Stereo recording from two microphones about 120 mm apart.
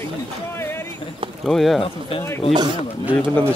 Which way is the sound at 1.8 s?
50° left (ahead or behind).